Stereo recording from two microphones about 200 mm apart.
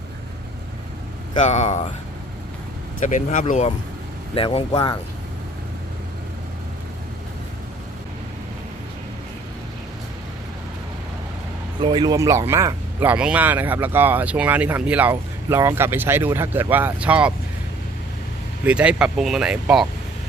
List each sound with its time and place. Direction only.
1.4 s speech: 35° left (ahead or behind)
3.0 s speech: 40° left (ahead or behind)
4.4 s speech: 25° left (ahead or behind)
11.8 s speech: 20° right (ahead or behind); by 17.3 s 5° right (ahead or behind)
18.6 s speech: 5° right (ahead or behind)